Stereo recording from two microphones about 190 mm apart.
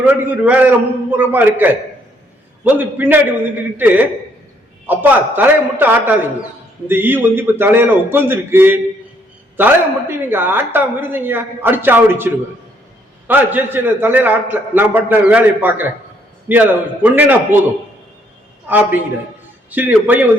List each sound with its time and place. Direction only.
0.0 s a woman's voice: 10° right (ahead or behind)
18.7 s a woman's voice: 10° right (ahead or behind)